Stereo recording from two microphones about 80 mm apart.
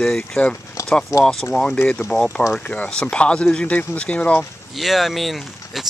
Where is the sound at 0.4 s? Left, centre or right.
Centre.